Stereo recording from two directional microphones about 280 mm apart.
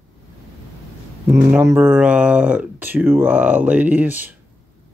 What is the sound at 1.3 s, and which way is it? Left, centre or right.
Speech, centre.